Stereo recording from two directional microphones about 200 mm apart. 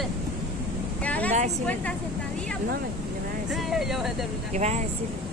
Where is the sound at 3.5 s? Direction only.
Centre (ahead or behind).